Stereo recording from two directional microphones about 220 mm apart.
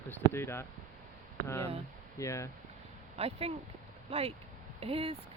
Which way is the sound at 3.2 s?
25° right (ahead or behind).